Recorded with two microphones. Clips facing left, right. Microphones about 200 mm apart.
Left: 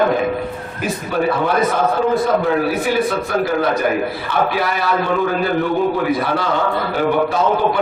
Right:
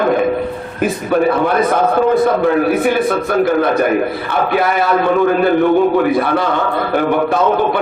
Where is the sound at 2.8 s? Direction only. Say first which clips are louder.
Right 4 dB; 55° right (ahead or behind).